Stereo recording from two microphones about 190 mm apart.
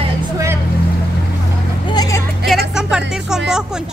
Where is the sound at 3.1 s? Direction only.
5° right (ahead or behind).